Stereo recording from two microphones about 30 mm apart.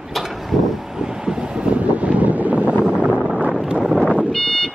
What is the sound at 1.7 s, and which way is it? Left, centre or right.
Wind noise, right.